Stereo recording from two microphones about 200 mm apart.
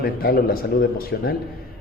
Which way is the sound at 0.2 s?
50° left (ahead or behind).